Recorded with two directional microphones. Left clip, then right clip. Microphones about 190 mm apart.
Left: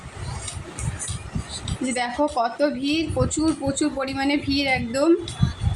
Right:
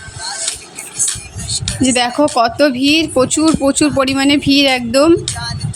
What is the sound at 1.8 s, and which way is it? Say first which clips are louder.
Speech: right 10 dB; 55° right (ahead or behind).